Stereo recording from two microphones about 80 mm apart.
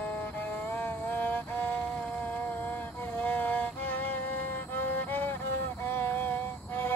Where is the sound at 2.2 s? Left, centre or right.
Left.